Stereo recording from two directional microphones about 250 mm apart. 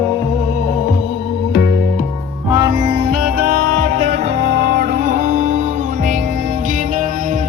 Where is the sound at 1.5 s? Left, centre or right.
Left.